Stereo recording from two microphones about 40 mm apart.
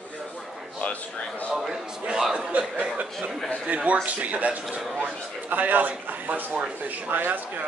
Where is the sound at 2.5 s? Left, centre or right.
Right.